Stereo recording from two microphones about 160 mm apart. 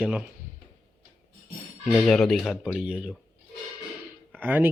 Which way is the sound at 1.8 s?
Centre (ahead or behind).